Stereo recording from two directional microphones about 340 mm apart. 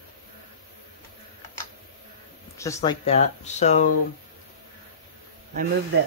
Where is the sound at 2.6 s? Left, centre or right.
Centre.